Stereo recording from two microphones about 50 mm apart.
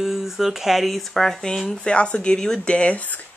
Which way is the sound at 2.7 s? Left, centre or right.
Left.